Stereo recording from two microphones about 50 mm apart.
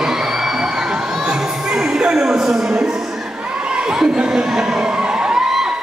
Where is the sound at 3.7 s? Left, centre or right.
Centre.